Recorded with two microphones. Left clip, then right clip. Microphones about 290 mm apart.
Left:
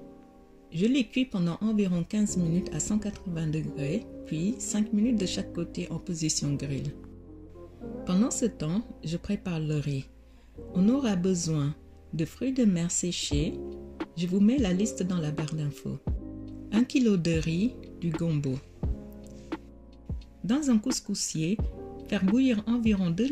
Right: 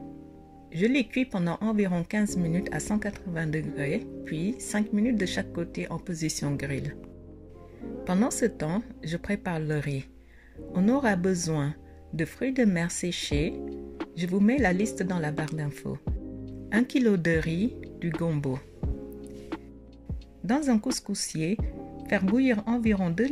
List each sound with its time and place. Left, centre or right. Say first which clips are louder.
0.7 s speech: right 1 dB; right
8.0 s speech: right 2 dB; right
14.0 s music: left 1 dB; centre
14.4 s speech: right 3 dB; right
18.8 s music: right 3 dB; centre
20.4 s speech: right 1 dB; right